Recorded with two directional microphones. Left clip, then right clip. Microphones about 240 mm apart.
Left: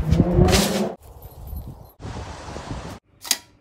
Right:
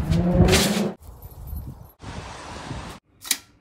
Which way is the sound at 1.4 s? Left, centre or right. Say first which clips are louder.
Left 2 dB; left.